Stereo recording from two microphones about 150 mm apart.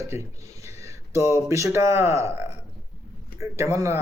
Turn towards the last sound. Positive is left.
turn(degrees=-20)  # may be behind; listen again after turning